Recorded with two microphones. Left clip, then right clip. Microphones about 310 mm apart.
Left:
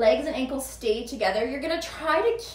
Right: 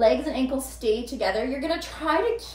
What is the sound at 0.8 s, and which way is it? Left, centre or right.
Speech, centre.